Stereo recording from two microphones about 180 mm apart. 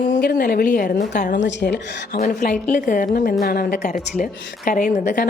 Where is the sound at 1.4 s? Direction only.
80° left.